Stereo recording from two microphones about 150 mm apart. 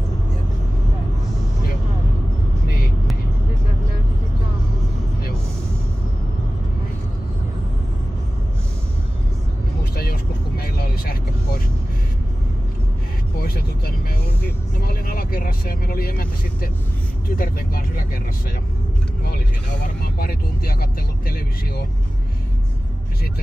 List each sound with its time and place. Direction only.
9.9 s vehicle: 90° left
13.4 s vehicle: 90° left; by 18.0 s 70° left (ahead or behind)
19.7 s vehicle: 80° left